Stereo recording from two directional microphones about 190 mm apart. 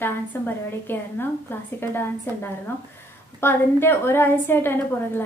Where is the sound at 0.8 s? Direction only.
10° left (ahead or behind).